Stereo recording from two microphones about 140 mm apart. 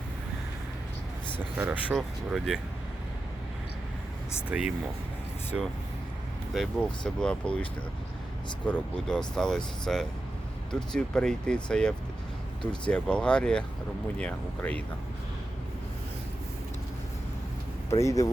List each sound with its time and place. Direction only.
1.5 s speech: 15° right (ahead or behind)
2.0 s speech: centre (ahead or behind)
4.4 s speech: 10° right (ahead or behind)
8.6 s speech: 5° left (ahead or behind)
18.0 s speech: 25° left (ahead or behind)